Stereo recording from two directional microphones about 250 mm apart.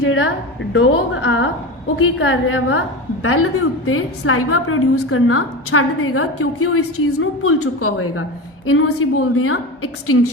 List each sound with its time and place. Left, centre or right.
0.0 s a woman's voice: left